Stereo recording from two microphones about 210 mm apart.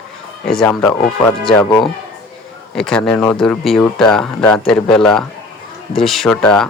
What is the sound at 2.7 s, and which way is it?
Speech, 5° left (ahead or behind).